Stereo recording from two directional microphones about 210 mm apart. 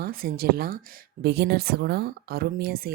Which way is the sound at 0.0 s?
45° right (ahead or behind).